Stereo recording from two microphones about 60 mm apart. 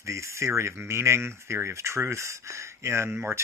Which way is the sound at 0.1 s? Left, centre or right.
Right.